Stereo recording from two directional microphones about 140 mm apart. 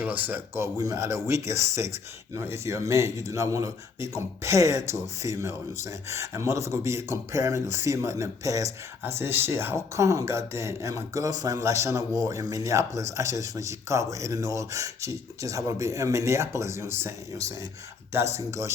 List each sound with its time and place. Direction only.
0.0 s speech: 10° right (ahead or behind)